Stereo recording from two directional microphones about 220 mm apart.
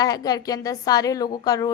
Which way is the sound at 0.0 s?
15° left (ahead or behind).